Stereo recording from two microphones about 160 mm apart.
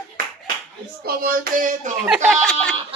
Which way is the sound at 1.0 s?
65° right (ahead or behind).